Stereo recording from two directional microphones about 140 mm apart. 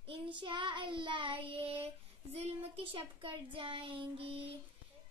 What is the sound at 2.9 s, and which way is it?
Child singing, 40° right (ahead or behind).